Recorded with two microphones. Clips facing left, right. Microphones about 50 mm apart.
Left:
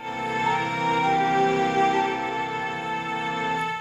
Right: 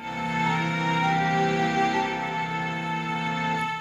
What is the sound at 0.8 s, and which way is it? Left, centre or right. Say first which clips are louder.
Music: left 3 dB; left.